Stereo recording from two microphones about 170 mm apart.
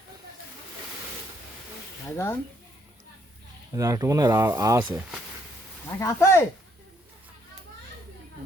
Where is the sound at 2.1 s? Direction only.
15° left (ahead or behind).